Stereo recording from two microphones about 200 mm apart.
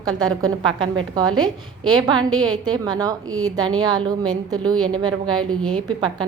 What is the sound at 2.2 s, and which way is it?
Speech, 90° right.